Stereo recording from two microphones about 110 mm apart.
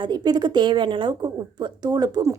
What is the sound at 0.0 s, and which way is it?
A woman's voice, 40° right (ahead or behind).